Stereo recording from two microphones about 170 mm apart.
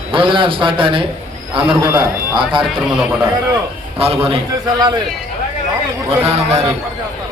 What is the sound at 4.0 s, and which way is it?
Speech, 35° right (ahead or behind).